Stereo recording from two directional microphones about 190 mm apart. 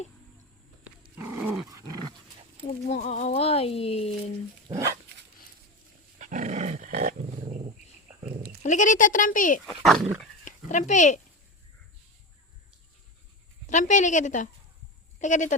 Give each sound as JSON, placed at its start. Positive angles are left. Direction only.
{"t": 1.1, "sound": "dog", "side_deg": -10}
{"t": 2.6, "sound": "speech", "side_deg": 35}
{"t": 6.1, "sound": "dog", "side_deg": -40}
{"t": 8.6, "sound": "speech", "side_deg": 40}
{"t": 9.6, "sound": "speech", "side_deg": 0}
{"t": 10.4, "sound": "speech", "side_deg": 40}
{"t": 13.7, "sound": "speech", "side_deg": 40}